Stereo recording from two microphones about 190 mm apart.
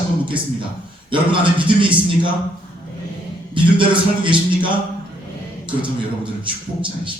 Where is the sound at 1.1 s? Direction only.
25° right (ahead or behind).